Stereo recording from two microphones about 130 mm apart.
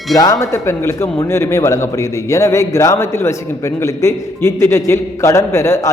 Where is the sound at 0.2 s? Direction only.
25° left (ahead or behind).